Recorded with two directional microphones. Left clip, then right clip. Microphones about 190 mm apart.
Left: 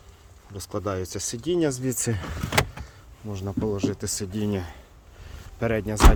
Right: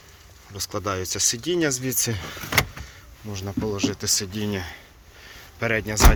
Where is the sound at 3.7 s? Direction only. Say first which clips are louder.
Right 4 dB; 30° left (ahead or behind).